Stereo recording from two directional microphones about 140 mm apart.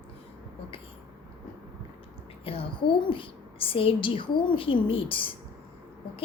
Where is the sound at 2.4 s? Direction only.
40° left (ahead or behind).